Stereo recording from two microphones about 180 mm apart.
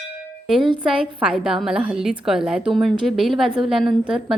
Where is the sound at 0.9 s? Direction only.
5° right (ahead or behind).